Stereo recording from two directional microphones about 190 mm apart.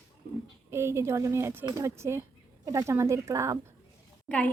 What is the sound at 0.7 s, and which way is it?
Speech, 15° right (ahead or behind).